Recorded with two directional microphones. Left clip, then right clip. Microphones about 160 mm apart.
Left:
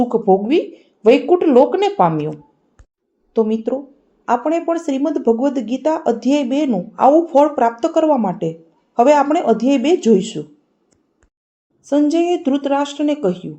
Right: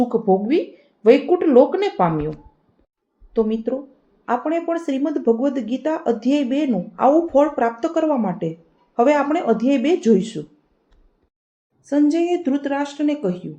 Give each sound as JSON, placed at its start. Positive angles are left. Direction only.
{"t": 0.0, "sound": "speech", "side_deg": 20}
{"t": 3.3, "sound": "speech", "side_deg": 20}
{"t": 11.9, "sound": "speech", "side_deg": 30}